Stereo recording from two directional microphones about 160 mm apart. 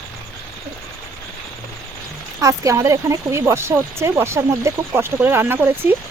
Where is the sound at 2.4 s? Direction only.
20° right (ahead or behind).